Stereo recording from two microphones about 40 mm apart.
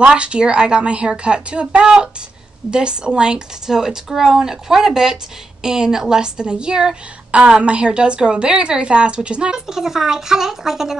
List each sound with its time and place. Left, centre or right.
0.0 s a woman's voice: right
7.2 s a woman's voice: right; by 11.0 s centre